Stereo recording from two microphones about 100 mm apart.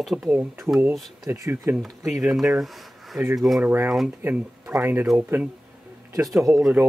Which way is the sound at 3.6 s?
20° right (ahead or behind).